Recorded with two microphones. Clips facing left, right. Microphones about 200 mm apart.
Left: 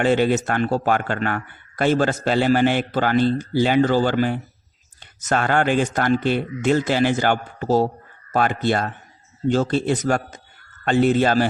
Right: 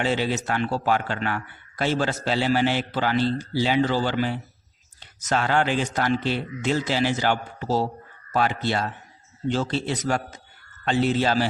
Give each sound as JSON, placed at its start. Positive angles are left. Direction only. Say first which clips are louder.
{"t": 0.0, "sound": "speech", "louder": "left 6 dB", "side_deg": 50}